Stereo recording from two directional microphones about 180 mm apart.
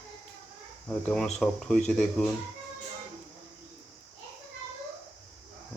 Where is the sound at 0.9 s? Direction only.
5° left (ahead or behind).